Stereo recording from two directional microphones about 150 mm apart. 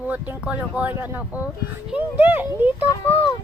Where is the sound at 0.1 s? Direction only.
10° right (ahead or behind).